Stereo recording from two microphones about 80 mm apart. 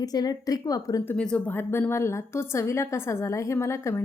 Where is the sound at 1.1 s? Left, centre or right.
Centre.